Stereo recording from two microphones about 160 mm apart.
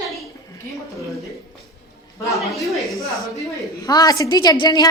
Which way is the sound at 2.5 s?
Centre (ahead or behind).